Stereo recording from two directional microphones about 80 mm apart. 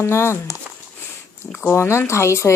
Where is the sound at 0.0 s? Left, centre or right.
Left.